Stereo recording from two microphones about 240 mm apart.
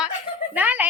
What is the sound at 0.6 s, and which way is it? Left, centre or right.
Speech, centre.